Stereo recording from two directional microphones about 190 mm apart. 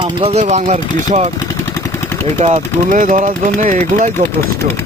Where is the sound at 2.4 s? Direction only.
40° right (ahead or behind).